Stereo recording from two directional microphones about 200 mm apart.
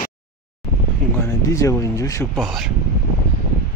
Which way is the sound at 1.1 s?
15° left (ahead or behind).